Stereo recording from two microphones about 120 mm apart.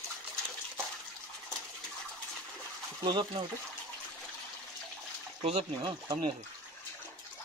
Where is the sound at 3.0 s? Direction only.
40° right (ahead or behind).